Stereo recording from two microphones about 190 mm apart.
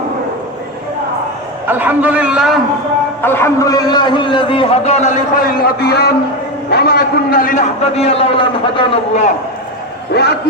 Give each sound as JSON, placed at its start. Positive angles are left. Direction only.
{"t": 1.6, "sound": "a man's voice", "side_deg": -10}
{"t": 3.2, "sound": "a man's voice", "side_deg": 10}
{"t": 10.1, "sound": "a man's voice", "side_deg": 60}